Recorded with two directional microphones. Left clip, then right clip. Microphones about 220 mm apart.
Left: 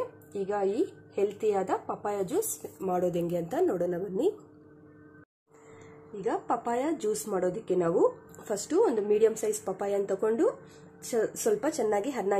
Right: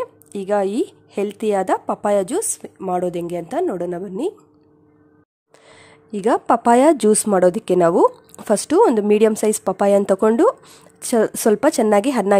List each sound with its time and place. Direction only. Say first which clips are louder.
0.5 s speech: right 10 dB; 50° right (ahead or behind)
6.2 s speech: right 14 dB; 50° right (ahead or behind)